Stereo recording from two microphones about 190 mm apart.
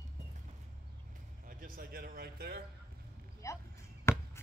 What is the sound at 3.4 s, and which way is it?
Chop, 15° left (ahead or behind).